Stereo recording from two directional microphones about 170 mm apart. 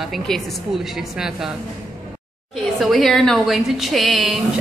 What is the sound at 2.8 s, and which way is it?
A woman's voice, centre (ahead or behind).